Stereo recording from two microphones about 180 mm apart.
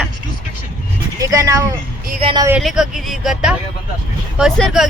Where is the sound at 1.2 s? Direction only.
20° right (ahead or behind).